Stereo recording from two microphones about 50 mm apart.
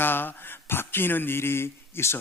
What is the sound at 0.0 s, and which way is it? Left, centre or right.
Speech, left.